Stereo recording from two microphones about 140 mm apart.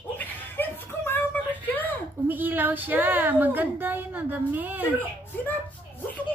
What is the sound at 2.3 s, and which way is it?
A woman's voice, 15° right (ahead or behind).